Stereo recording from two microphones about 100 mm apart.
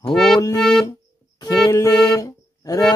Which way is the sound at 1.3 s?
35° left (ahead or behind).